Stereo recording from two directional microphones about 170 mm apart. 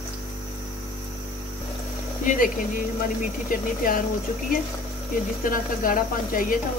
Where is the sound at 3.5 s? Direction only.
55° left (ahead or behind).